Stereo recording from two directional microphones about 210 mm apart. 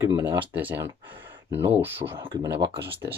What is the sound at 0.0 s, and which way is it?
Speech, 15° right (ahead or behind).